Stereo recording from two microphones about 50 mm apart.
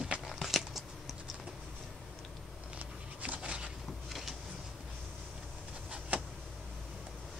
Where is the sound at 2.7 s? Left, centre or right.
Right.